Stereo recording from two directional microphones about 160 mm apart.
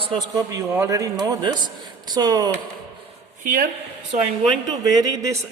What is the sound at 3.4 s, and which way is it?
Speech, 60° right (ahead or behind).